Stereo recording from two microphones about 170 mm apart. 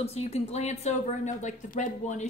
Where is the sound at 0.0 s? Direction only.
40° left (ahead or behind).